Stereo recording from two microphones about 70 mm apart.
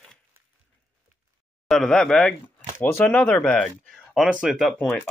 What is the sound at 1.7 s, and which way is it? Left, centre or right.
Speech, centre.